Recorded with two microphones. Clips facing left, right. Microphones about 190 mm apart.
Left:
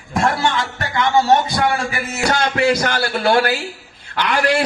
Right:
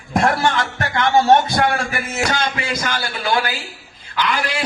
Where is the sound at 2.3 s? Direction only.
60° left (ahead or behind).